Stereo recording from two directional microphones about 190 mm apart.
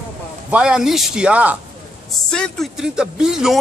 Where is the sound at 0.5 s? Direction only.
5° right (ahead or behind).